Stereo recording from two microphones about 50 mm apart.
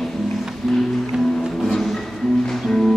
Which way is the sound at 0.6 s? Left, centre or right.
Centre.